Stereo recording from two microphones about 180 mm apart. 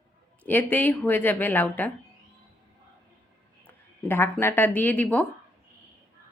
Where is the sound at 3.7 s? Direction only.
10° left (ahead or behind).